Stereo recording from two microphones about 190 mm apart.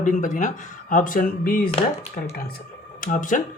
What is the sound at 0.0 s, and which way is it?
Speech, 40° left (ahead or behind).